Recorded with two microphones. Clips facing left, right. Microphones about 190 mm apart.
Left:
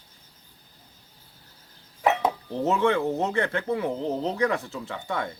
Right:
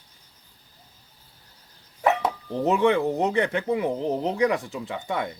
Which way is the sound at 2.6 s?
15° right (ahead or behind).